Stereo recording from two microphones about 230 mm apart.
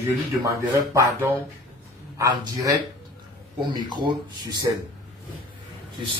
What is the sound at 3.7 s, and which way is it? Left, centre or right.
Speech, centre.